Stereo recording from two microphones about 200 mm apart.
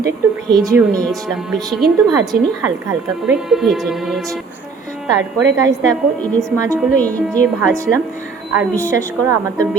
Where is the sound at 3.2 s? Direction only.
Centre (ahead or behind).